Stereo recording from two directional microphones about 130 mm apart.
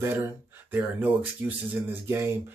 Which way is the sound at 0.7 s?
15° right (ahead or behind).